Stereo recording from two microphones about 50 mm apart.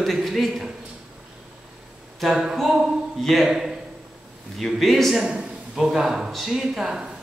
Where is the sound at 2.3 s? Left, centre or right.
Centre.